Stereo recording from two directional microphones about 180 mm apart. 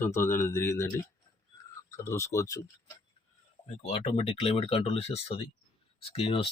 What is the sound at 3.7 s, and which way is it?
Speech, 35° left (ahead or behind).